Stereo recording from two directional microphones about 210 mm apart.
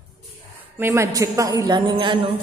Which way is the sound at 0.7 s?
15° right (ahead or behind).